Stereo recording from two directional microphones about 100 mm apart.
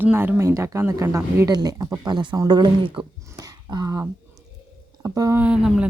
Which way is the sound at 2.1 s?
50° right (ahead or behind).